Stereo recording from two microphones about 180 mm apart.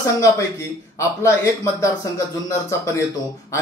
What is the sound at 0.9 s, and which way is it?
Speech, 15° left (ahead or behind).